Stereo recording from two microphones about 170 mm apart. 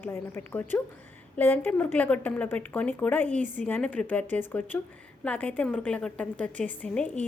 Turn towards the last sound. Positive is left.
turn(degrees=5)  # may be behind; listen again after turning